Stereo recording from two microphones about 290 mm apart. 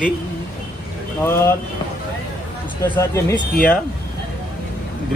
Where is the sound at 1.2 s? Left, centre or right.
Centre.